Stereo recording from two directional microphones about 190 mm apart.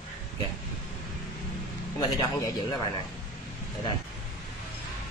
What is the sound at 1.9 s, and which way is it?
Speech, 20° left (ahead or behind).